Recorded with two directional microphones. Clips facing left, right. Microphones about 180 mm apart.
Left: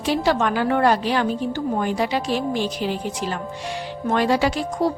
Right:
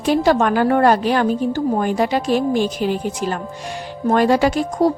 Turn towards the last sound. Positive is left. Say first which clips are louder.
# right 5 dB
turn(degrees=-45)  # may be behind; listen again after turning